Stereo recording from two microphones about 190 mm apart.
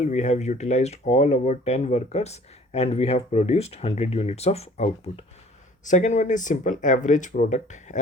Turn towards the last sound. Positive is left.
turn(degrees=40)  # may be behind; listen again after turning